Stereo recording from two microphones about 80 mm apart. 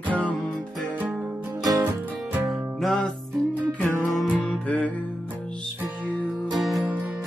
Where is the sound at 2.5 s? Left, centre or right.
Centre.